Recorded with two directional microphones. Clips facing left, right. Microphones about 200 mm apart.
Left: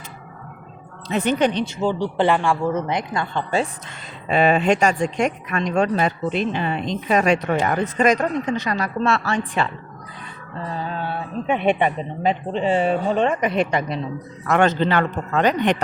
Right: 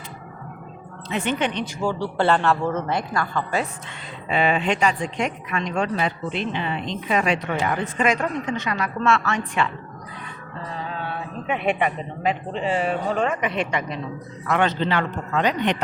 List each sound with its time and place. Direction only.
1.1 s speech: 40° left (ahead or behind)
1.6 s speech: 20° left (ahead or behind)
4.3 s speech: 45° left (ahead or behind)
11.4 s speech: 30° left (ahead or behind)
14.4 s speech: 45° left (ahead or behind)